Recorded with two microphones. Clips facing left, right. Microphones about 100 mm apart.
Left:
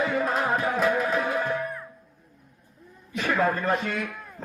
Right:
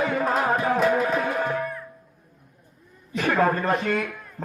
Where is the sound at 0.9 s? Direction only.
40° right (ahead or behind).